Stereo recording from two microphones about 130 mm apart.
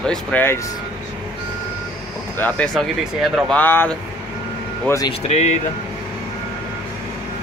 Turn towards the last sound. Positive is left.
turn(degrees=60)  # may be behind; listen again after turning